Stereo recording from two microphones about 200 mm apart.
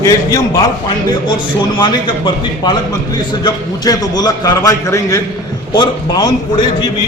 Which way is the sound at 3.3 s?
20° left (ahead or behind).